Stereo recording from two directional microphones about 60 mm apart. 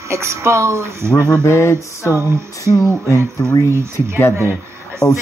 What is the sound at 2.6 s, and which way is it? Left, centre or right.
Speech, left.